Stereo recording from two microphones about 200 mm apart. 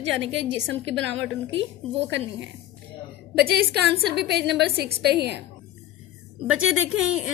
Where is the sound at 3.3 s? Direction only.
55° right (ahead or behind).